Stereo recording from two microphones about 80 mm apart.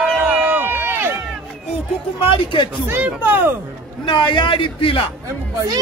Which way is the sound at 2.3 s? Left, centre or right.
Left.